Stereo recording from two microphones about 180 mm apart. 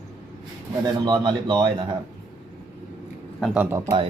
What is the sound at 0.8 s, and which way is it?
Speech, 25° right (ahead or behind).